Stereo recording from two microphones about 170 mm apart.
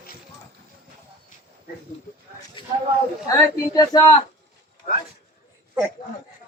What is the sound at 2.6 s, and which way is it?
Speech, 30° left (ahead or behind).